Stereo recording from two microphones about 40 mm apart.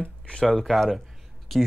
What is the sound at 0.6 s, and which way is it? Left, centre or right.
Speech, centre.